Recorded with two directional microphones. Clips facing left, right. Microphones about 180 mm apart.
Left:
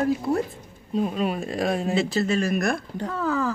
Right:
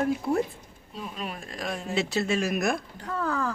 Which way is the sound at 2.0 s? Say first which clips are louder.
Left 3 dB; centre (ahead or behind).